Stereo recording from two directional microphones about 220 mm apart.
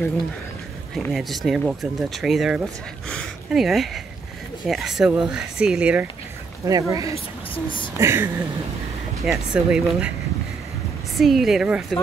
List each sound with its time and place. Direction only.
0.9 s speech: centre (ahead or behind)
7.5 s speech: 20° left (ahead or behind)
8.0 s speech: 10° right (ahead or behind)
11.1 s speech: centre (ahead or behind)